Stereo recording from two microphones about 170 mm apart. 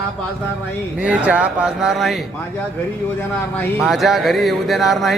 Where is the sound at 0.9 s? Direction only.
5° right (ahead or behind).